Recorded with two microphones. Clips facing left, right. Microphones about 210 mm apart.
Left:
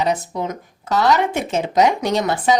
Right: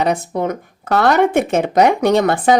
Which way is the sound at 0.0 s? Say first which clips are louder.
Right 3 dB; 55° right (ahead or behind).